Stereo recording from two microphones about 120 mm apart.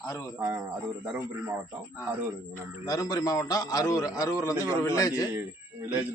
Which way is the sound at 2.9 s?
30° left (ahead or behind).